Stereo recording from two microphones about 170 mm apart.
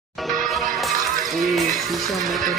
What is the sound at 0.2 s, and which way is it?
Music, centre (ahead or behind).